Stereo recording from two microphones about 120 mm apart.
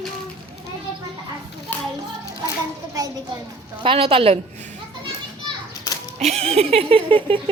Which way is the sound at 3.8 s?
50° right (ahead or behind).